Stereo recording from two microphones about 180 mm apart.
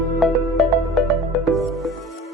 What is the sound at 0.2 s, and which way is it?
Music, centre (ahead or behind).